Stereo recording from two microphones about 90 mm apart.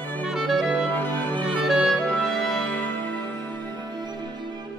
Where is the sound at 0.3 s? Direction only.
5° right (ahead or behind).